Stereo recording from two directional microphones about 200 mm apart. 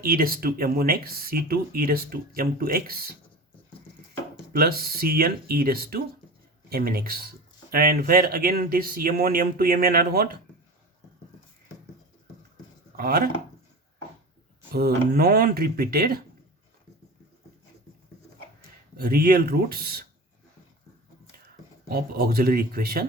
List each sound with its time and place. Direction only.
0.0 s speech: 50° right (ahead or behind)
4.5 s speech: 50° right (ahead or behind)
13.0 s speech: 50° right (ahead or behind)
14.7 s speech: 50° right (ahead or behind)
18.9 s speech: 45° right (ahead or behind)
21.8 s speech: 50° right (ahead or behind)